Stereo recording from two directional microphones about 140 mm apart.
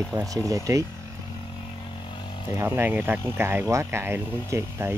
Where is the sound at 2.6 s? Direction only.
15° right (ahead or behind).